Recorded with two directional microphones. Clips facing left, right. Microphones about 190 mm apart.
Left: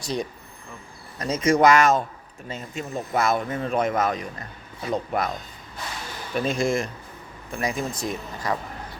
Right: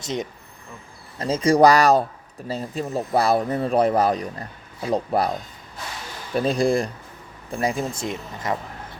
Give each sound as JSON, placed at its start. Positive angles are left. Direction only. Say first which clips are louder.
{"t": 0.0, "sound": "speech", "louder": "even", "side_deg": -20}
{"t": 6.3, "sound": "speech", "louder": "right 4 dB", "side_deg": -35}